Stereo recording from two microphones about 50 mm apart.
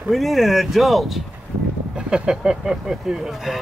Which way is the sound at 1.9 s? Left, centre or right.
Centre.